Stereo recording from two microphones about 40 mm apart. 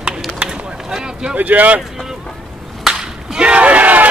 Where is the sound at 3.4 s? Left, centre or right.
Right.